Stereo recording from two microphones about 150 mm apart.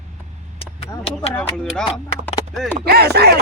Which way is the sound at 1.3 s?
5° left (ahead or behind).